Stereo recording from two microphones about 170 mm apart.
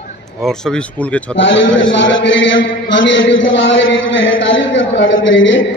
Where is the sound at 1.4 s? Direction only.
90° left.